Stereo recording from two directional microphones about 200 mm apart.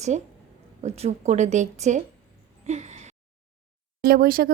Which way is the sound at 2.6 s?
35° right (ahead or behind).